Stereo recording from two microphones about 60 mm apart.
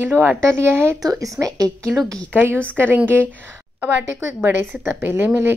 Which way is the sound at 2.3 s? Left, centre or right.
Right.